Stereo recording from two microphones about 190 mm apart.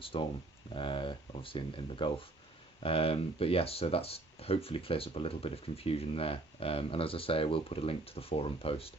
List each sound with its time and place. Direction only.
0.0 s speech: 30° left (ahead or behind)